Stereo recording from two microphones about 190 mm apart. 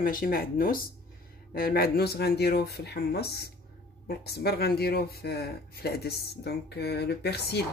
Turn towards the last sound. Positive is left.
turn(degrees=60)  # may be behind; listen again after turning